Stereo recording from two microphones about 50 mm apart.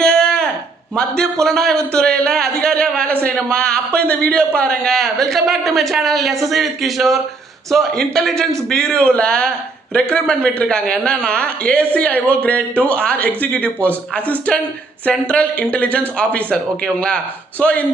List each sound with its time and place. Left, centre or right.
0.0 s a sound: centre
0.9 s a man's voice: centre
1.9 s a man's voice: centre
4.9 s a man's voice: centre; by 17.8 s left